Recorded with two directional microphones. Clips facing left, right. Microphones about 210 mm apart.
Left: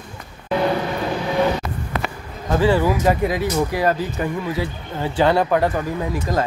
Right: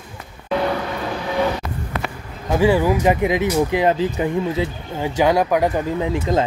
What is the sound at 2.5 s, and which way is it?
Speech, 10° right (ahead or behind).